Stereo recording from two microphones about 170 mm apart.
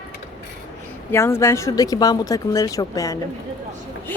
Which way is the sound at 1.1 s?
15° left (ahead or behind).